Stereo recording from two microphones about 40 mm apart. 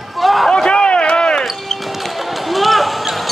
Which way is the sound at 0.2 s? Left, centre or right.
Centre.